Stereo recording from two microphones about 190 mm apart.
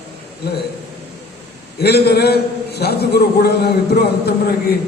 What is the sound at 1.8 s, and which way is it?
A man's voice, 60° left (ahead or behind).